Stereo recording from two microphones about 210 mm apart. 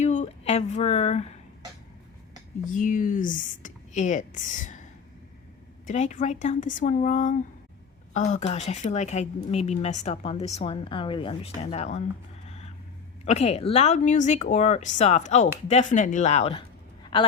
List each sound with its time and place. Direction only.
0.0 s speech: 35° left (ahead or behind)
2.6 s speech: 40° left (ahead or behind)
5.8 s speech: 35° left (ahead or behind)
12.5 s vehicle: 30° left (ahead or behind)
13.2 s speech: 30° left (ahead or behind)